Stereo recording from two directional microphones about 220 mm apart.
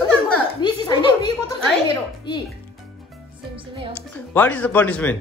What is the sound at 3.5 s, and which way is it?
Music, 25° right (ahead or behind).